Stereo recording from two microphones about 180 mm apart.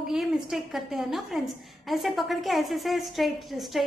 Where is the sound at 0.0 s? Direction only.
Centre (ahead or behind).